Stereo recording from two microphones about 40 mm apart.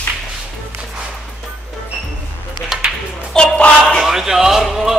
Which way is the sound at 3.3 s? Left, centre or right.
Left.